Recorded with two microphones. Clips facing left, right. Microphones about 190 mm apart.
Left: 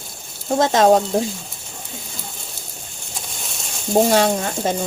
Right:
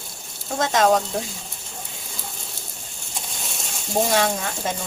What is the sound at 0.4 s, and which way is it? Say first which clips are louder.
Speech: left 5 dB; 35° left (ahead or behind).